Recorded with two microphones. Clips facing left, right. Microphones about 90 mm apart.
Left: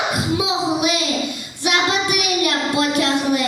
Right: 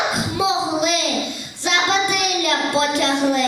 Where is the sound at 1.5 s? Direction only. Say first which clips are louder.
Even; 15° left (ahead or behind).